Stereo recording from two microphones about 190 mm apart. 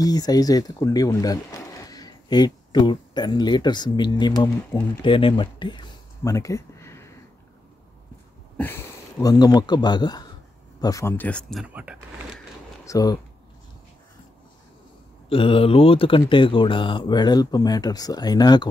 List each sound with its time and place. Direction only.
0.0 s speech: 20° left (ahead or behind)
9.2 s speech: 20° left (ahead or behind)
11.6 s speech: 5° right (ahead or behind)
12.8 s speech: 20° left (ahead or behind)
15.2 s speech: 30° left (ahead or behind)